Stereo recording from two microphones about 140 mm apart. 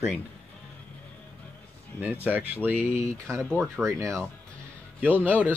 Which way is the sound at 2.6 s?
15° right (ahead or behind).